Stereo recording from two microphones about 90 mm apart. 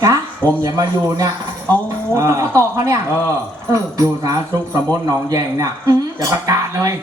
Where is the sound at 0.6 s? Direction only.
45° right (ahead or behind).